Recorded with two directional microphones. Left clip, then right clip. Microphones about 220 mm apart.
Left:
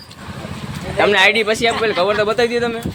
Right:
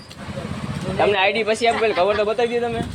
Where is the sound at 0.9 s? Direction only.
15° left (ahead or behind).